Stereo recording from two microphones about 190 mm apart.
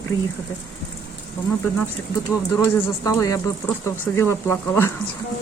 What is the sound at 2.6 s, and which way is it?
Speech, 15° left (ahead or behind).